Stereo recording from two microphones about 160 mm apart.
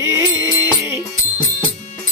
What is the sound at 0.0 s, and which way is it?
Music, 15° right (ahead or behind).